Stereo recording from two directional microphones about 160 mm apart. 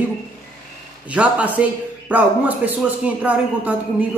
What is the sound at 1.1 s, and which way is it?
A man's voice, 10° right (ahead or behind).